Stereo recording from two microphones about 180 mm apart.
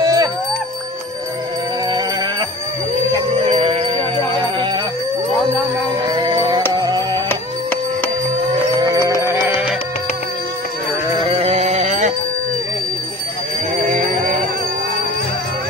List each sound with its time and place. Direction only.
0.0 s music: 20° right (ahead or behind)
3.4 s music: 30° right (ahead or behind)
6.1 s music: 25° right (ahead or behind)
7.2 s music: 10° left (ahead or behind)
11.2 s music: 35° right (ahead or behind)
13.8 s music: 50° right (ahead or behind)